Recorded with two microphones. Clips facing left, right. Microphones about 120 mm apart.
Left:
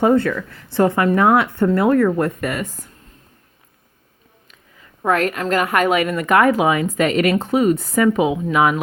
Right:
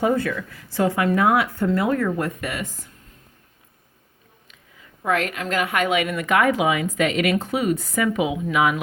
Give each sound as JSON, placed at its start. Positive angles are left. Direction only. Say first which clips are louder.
{"t": 0.0, "sound": "speech", "louder": "left 6 dB", "side_deg": 55}
{"t": 5.0, "sound": "a woman's voice", "louder": "left 5 dB", "side_deg": 40}